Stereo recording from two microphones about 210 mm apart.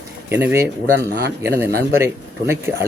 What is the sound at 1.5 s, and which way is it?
Speech, 10° right (ahead or behind).